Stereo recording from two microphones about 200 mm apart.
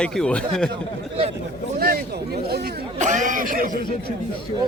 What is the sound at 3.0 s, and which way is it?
Speech, 40° right (ahead or behind).